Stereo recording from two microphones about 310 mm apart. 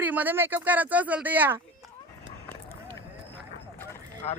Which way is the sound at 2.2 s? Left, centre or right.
Centre.